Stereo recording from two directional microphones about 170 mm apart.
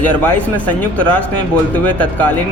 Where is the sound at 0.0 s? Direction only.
10° left (ahead or behind).